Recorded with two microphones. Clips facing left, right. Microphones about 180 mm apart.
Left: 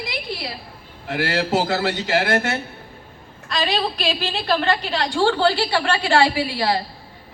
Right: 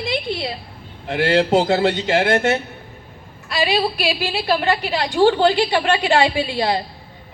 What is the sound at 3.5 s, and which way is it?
A woman's voice, 10° right (ahead or behind).